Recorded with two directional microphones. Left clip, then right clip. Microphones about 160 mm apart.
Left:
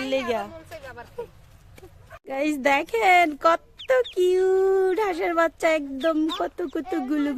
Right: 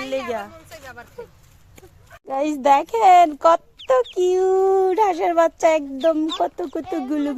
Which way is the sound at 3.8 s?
20° left (ahead or behind).